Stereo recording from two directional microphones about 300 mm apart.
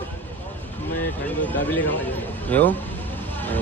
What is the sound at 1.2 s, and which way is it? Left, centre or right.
Speech, centre.